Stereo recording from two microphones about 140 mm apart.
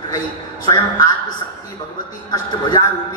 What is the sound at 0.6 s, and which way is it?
Speech, 30° left (ahead or behind).